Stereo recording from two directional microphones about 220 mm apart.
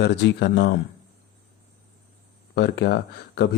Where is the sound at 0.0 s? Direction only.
50° left (ahead or behind).